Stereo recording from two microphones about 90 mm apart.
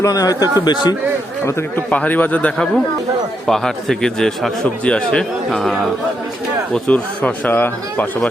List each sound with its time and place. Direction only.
0.0 s speech: 40° left (ahead or behind)
1.9 s speech: 15° left (ahead or behind)
3.4 s a man's voice: 5° left (ahead or behind); by 8.0 s 20° left (ahead or behind)